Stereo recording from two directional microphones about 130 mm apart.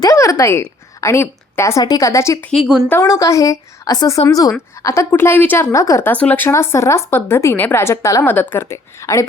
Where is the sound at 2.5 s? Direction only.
5° right (ahead or behind).